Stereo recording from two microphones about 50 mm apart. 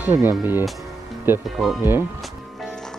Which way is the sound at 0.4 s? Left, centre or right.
Right.